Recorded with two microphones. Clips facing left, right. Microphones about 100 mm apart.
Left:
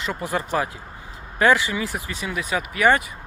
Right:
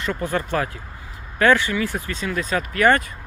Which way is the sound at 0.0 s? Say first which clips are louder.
Right 2 dB; 15° left (ahead or behind).